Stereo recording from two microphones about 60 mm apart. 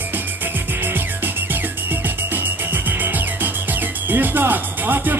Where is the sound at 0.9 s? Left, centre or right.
Right.